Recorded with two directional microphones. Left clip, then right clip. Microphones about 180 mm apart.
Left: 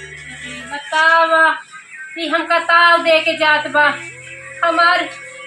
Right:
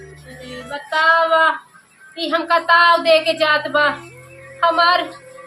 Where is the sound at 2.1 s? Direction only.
30° right (ahead or behind).